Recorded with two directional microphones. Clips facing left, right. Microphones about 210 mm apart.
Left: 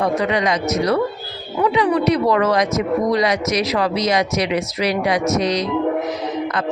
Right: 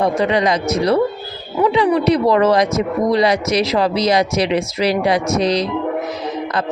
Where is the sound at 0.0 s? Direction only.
30° right (ahead or behind).